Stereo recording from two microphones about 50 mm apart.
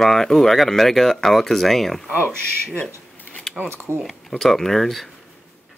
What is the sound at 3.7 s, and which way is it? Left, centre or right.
Speech, right.